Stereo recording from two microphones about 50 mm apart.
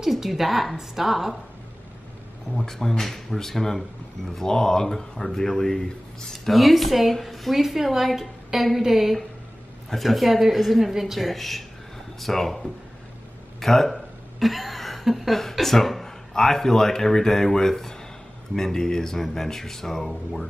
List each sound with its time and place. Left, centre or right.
0.0 s speech: centre
2.5 s speech: centre